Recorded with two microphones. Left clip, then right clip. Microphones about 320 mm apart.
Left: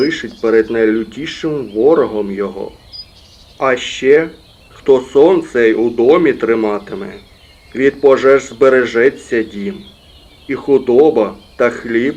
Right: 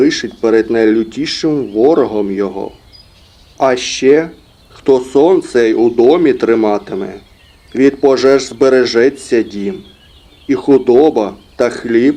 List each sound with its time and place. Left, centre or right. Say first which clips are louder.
0.0 s speech: right 3 dB; right
3.6 s speech: right 3 dB; right